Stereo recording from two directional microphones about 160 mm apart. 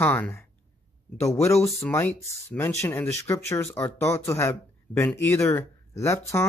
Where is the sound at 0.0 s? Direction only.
10° left (ahead or behind).